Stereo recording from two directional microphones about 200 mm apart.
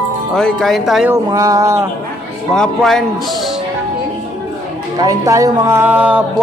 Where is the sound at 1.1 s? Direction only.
15° right (ahead or behind).